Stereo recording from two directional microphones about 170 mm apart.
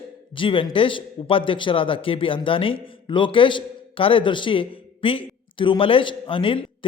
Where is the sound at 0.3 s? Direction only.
30° left (ahead or behind).